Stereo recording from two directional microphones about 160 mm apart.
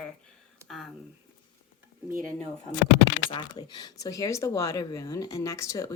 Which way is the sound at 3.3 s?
25° left (ahead or behind).